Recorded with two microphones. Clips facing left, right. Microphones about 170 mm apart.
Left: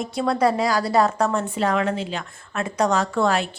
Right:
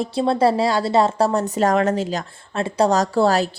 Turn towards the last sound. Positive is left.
turn(degrees=-35)  # may be behind; listen again after turning